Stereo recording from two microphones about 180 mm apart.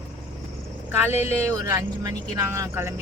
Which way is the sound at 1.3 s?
15° right (ahead or behind).